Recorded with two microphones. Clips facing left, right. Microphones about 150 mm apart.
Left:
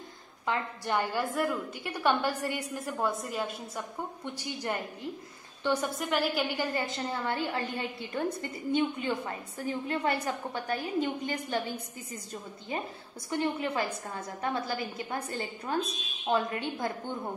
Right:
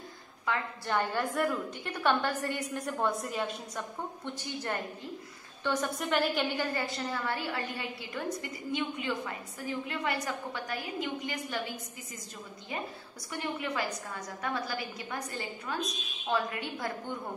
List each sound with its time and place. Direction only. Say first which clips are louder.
0.5 s a woman's voice: left 1 dB; 15° left (ahead or behind)
1.2 s a woman's voice: even; centre (ahead or behind)
2.0 s a woman's voice: left 1 dB; 10° left (ahead or behind)
2.8 s a woman's voice: even; centre (ahead or behind)
4.2 s a woman's voice: left 1 dB; 15° left (ahead or behind)
6.6 s a woman's voice: left 1 dB; 15° left (ahead or behind)
13.3 s a woman's voice: left 5 dB; 30° left (ahead or behind)